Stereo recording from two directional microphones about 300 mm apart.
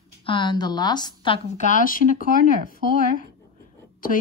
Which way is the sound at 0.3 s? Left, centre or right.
Centre.